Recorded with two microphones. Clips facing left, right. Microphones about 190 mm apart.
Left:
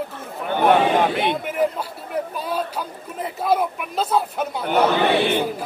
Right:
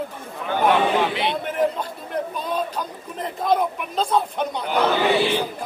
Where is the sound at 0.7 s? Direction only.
50° left (ahead or behind).